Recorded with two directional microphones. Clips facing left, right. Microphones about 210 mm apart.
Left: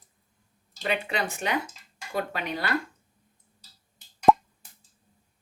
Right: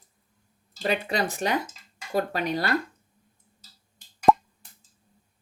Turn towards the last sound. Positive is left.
turn(degrees=0)  # may be behind; listen again after turning